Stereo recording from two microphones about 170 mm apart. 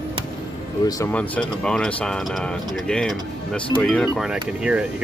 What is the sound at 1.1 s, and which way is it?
Speech, 5° left (ahead or behind).